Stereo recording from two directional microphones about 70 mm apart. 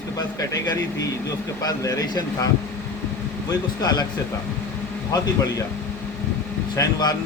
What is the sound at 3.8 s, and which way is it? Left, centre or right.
Speech, left.